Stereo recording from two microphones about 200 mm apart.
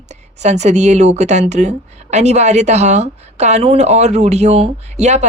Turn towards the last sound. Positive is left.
turn(degrees=-35)  # may be behind; listen again after turning